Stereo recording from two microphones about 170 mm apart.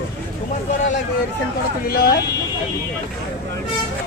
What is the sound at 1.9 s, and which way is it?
Speech, 60° left (ahead or behind).